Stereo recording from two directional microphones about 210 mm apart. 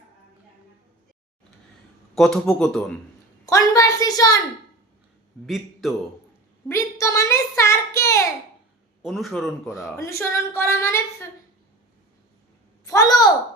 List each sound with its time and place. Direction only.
2.1 s a man's voice: centre (ahead or behind)
3.4 s a woman's voice: 15° left (ahead or behind)
5.8 s a man's voice: centre (ahead or behind)
6.7 s a sound: 15° left (ahead or behind)
9.0 s a man's voice: centre (ahead or behind)
10.0 s a woman's voice: 15° left (ahead or behind)
12.8 s a sound: 15° left (ahead or behind)